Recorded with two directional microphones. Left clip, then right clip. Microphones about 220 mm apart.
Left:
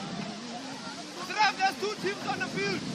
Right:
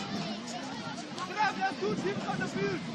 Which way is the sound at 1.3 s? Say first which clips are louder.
Left 5 dB; 45° left (ahead or behind).